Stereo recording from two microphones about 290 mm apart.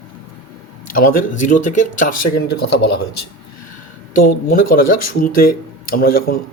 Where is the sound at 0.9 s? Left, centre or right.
Left.